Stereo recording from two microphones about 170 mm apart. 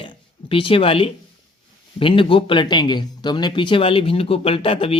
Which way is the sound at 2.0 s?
30° left (ahead or behind).